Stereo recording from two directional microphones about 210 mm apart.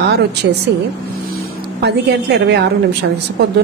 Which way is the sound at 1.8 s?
50° right (ahead or behind).